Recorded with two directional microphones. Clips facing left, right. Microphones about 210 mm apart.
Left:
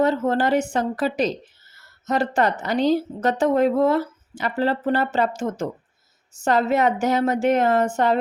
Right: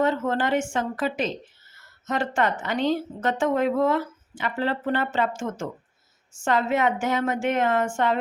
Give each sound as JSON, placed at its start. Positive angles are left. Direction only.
{"t": 0.0, "sound": "a woman's voice", "side_deg": 35}